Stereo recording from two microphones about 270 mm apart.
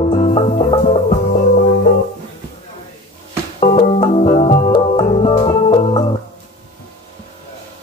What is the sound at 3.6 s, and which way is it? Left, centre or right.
Music, left.